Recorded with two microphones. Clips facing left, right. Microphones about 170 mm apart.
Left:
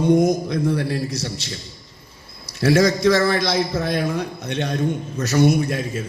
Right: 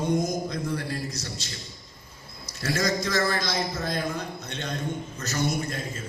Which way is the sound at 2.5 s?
65° left (ahead or behind).